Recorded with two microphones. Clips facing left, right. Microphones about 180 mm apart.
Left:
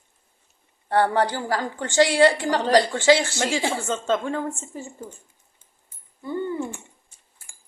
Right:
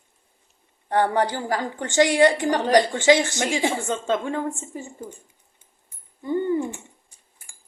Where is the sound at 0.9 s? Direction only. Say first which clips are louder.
Even; 15° right (ahead or behind).